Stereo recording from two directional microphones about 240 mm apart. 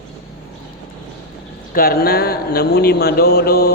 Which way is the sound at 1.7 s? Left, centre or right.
Left.